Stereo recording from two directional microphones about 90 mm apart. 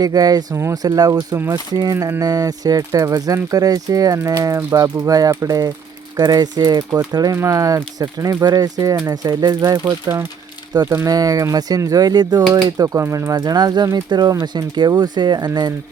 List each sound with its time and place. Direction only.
0.0 s speech: 45° right (ahead or behind)
7.3 s speech: 35° right (ahead or behind)
10.1 s speech: 35° right (ahead or behind); by 15.7 s 50° right (ahead or behind)